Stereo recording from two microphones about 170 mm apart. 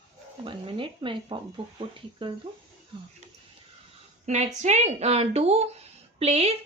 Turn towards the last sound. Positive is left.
turn(degrees=-35)  # may be behind; listen again after turning